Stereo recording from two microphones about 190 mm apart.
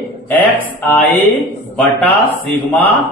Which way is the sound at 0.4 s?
10° left (ahead or behind).